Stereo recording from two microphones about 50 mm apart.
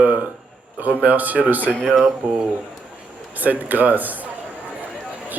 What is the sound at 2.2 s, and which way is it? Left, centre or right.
Speech, right.